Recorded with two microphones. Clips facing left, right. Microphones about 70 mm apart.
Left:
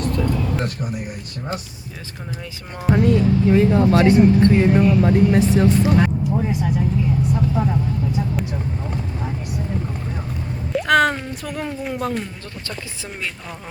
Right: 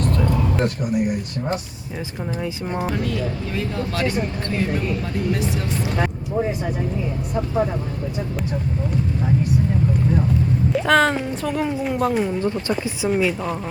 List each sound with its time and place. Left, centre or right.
2.9 s speech: left
10.7 s speech: centre